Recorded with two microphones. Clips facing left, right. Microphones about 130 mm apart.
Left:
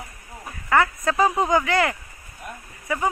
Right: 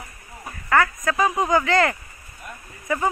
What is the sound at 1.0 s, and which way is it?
Speech, 30° left (ahead or behind).